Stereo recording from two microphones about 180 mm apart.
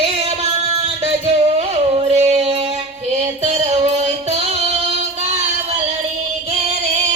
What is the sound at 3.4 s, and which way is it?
Music, 35° right (ahead or behind).